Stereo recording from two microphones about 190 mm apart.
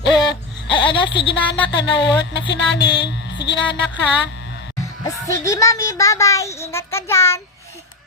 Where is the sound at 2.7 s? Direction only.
65° left (ahead or behind).